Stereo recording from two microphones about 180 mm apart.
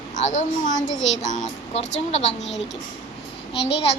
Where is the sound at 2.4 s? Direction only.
85° left.